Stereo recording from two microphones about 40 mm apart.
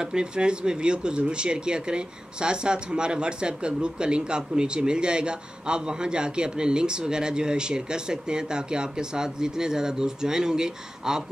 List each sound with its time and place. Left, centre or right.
0.0 s speech: right